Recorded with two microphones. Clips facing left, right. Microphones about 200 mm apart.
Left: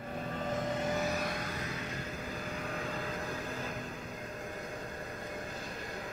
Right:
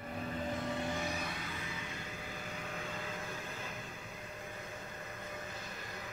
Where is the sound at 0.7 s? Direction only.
40° left (ahead or behind).